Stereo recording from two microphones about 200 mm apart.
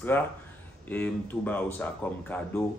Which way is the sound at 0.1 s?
10° left (ahead or behind).